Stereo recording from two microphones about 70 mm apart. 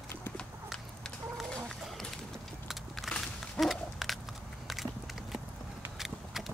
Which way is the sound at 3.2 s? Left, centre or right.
Centre.